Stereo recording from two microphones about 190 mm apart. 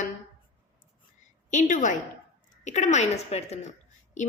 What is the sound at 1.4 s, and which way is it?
A woman's voice, 45° left (ahead or behind).